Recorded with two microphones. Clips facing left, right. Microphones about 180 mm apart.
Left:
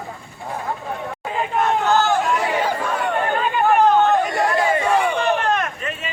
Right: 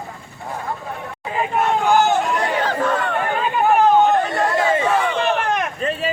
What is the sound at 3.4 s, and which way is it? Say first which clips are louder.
Chatter: right 1 dB; centre (ahead or behind).